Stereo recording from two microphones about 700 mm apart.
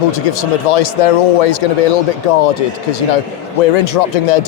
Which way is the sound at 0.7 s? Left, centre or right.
Left.